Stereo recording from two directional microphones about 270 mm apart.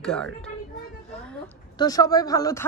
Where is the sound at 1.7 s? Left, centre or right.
Centre.